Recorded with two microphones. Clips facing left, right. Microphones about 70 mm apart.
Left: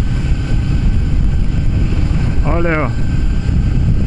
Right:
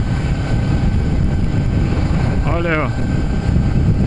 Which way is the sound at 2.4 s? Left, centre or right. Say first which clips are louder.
Left 4 dB; centre.